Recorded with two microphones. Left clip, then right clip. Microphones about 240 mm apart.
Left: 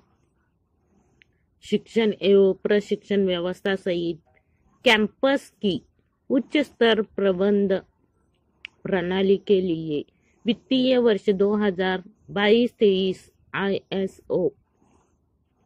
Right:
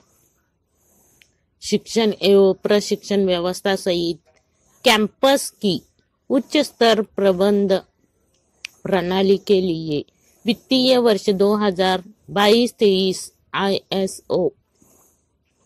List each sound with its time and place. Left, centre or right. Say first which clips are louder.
1.7 s speech: right 3 dB; right
2.3 s a woman's voice: right 4 dB; centre
3.9 s speech: right 5 dB; right
4.8 s a woman's voice: right 4 dB; centre
5.6 s speech: right 4 dB; right
6.5 s a woman's voice: right 4 dB; centre
8.8 s a woman's voice: right 5 dB; centre
9.3 s a woman's voice: right 2 dB; right
10.9 s a woman's voice: right 4 dB; centre
12.5 s speech: right 3 dB; right
13.1 s a woman's voice: right 5 dB; centre